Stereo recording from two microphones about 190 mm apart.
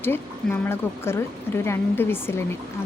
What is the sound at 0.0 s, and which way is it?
Speech, 10° left (ahead or behind).